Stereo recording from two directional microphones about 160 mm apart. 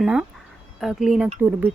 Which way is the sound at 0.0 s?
5° right (ahead or behind).